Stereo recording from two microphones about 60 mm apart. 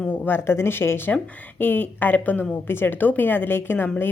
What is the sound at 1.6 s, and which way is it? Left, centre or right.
A woman's voice, left.